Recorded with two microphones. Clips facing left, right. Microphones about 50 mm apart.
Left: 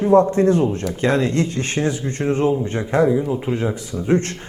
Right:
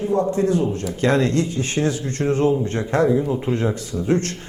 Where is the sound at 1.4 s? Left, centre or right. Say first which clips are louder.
Left 1 dB; left.